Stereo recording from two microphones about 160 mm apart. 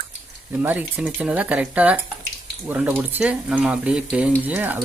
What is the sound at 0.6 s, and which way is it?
Speech, 10° right (ahead or behind).